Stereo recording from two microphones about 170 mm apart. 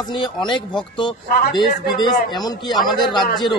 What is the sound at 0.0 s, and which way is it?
Speech, 25° left (ahead or behind).